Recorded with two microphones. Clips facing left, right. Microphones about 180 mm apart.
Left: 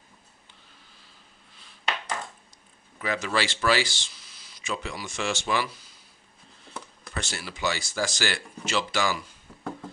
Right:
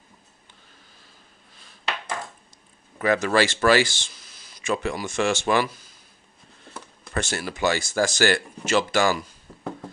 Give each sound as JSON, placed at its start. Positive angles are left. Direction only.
{"t": 3.0, "sound": "speech", "side_deg": -50}
{"t": 7.2, "sound": "speech", "side_deg": -50}